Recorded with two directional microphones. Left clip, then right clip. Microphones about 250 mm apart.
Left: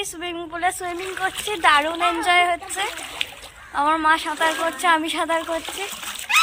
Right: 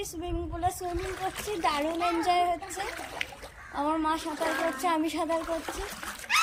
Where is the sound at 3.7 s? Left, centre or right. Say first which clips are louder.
Left 9 dB; left.